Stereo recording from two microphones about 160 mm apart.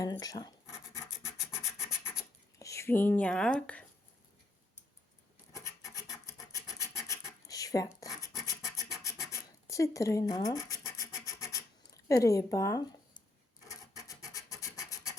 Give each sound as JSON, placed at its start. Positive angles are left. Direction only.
{"t": 0.0, "sound": "a sound", "side_deg": 25}
{"t": 1.5, "sound": "scratch", "side_deg": 15}
{"t": 2.6, "sound": "speech", "side_deg": 20}
{"t": 5.5, "sound": "filing", "side_deg": 20}
{"t": 6.5, "sound": "scratch", "side_deg": 20}
{"t": 12.0, "sound": "speech", "side_deg": 20}
{"t": 13.7, "sound": "scratch", "side_deg": 20}